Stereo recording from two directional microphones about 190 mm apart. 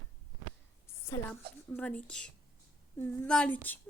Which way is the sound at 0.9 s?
10° left (ahead or behind).